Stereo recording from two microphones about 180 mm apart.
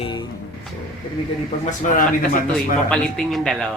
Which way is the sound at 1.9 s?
50° left (ahead or behind).